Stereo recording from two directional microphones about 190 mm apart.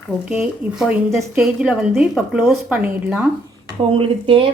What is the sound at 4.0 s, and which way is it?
Speech, 30° right (ahead or behind).